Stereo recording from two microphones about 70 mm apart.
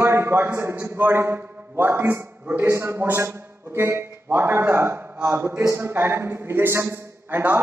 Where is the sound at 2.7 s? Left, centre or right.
Right.